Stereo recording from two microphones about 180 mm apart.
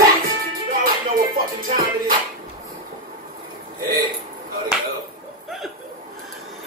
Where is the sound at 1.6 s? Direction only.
55° right (ahead or behind).